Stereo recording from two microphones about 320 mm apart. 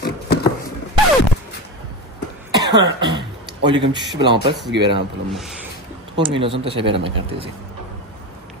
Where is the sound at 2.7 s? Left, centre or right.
Centre.